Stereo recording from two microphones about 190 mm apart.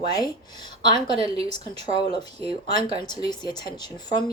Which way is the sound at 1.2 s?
30° right (ahead or behind).